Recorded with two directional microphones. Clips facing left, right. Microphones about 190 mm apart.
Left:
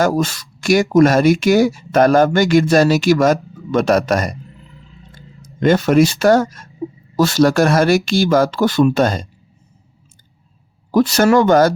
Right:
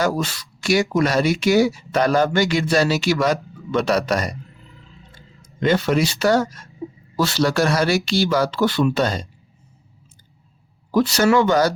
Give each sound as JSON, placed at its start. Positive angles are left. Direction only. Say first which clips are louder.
{"t": 0.2, "sound": "speech", "louder": "left 6 dB", "side_deg": 45}
{"t": 5.5, "sound": "speech", "louder": "left 6 dB", "side_deg": 45}
{"t": 10.9, "sound": "speech", "louder": "left 4 dB", "side_deg": 45}